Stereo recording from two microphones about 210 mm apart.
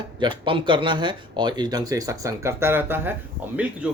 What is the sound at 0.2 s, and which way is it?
Speech, 25° right (ahead or behind).